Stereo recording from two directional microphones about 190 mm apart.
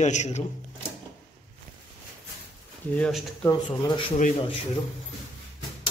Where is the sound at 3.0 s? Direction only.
Centre (ahead or behind).